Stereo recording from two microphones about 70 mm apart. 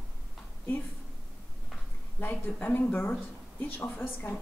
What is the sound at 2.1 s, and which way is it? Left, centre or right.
A woman's voice, left.